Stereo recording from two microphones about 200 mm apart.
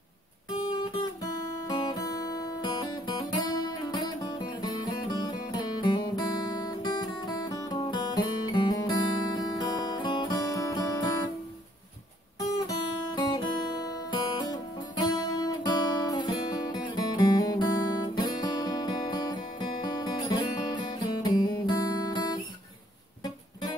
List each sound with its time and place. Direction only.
1.7 s guitar: 20° left (ahead or behind)
12.4 s guitar: 15° left (ahead or behind)